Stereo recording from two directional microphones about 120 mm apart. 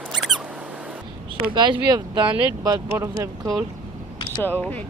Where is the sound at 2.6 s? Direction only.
25° right (ahead or behind).